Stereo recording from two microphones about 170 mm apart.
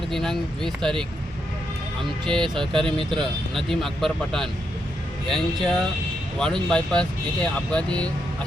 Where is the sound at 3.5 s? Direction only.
Centre (ahead or behind).